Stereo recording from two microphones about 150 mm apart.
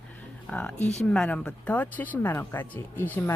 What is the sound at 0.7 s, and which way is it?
Speech, 50° left (ahead or behind).